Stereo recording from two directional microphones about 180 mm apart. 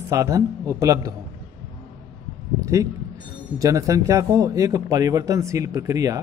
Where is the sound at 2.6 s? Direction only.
20° right (ahead or behind).